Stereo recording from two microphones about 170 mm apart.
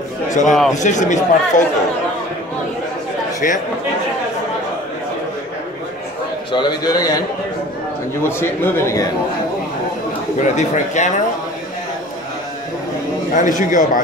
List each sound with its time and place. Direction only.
0.5 s a man's voice: centre (ahead or behind)
0.7 s speech: 45° left (ahead or behind)
3.3 s speech: 50° left (ahead or behind)
6.5 s a man's voice: 25° left (ahead or behind)
8.2 s a man's voice: 15° left (ahead or behind)
10.4 s speech: 45° left (ahead or behind)
13.3 s speech: 50° left (ahead or behind)